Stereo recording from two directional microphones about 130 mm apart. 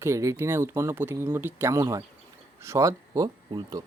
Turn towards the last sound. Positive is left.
turn(degrees=-25)  # may be behind; listen again after turning